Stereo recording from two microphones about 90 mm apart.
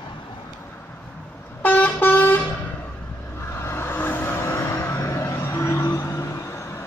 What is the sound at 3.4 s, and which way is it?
Vehicle, 25° left (ahead or behind).